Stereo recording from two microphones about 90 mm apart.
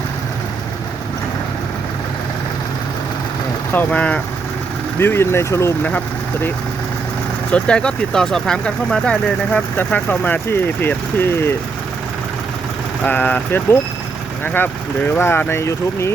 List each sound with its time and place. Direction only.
3.7 s speech: 20° left (ahead or behind)
4.9 s speech: 25° left (ahead or behind)
7.5 s speech: 10° left (ahead or behind); by 11.5 s 25° left (ahead or behind)
13.1 s speech: 20° left (ahead or behind)